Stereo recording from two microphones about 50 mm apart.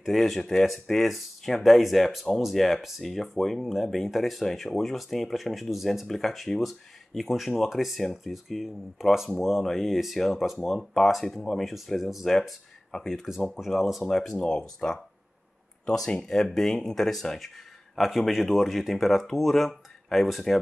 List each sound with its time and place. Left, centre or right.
0.0 s speech: centre
12.3 s speech: centre
13.7 s speech: centre
14.3 s speech: centre
16.3 s speech: centre